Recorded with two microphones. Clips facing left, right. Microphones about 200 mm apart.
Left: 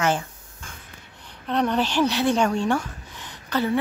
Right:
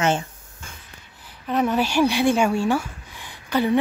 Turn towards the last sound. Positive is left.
turn(degrees=-15)  # may be behind; listen again after turning